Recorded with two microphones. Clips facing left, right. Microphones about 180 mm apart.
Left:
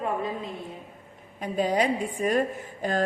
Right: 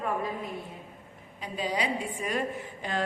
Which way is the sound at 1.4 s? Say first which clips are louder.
Left 7 dB; 50° left (ahead or behind).